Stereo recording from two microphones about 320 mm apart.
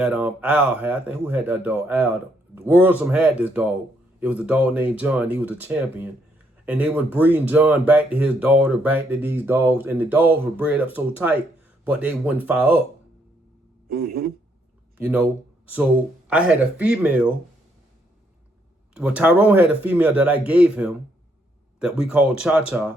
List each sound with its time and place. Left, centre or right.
0.0 s speech: centre
13.8 s speech: right
14.9 s speech: centre
18.9 s speech: centre